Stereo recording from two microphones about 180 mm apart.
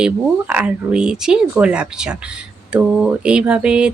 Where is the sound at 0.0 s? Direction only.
5° right (ahead or behind).